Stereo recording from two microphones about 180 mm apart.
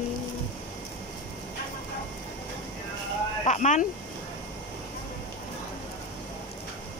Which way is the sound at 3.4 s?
40° left (ahead or behind).